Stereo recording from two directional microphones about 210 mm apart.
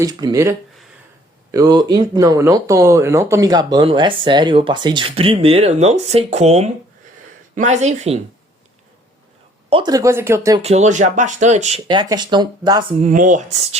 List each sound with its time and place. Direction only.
0.0 s speech: 20° right (ahead or behind)
9.6 s speech: 25° right (ahead or behind)
10.6 s speech: 30° right (ahead or behind)
11.9 s speech: 20° right (ahead or behind)
13.0 s speech: 35° right (ahead or behind)